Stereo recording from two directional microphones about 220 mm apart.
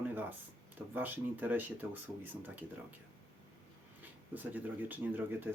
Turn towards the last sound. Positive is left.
turn(degrees=-10)  # may be behind; listen again after turning